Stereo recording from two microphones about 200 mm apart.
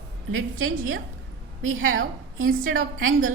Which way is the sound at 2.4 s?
45° right (ahead or behind).